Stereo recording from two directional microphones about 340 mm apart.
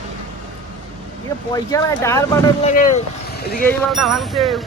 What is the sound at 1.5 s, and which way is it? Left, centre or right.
Speech, centre.